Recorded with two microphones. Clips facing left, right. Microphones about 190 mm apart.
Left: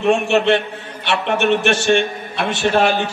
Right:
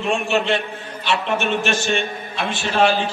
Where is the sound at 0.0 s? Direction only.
65° left (ahead or behind).